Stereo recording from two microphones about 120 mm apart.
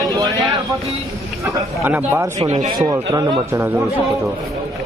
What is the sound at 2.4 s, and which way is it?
Speech, 65° right (ahead or behind).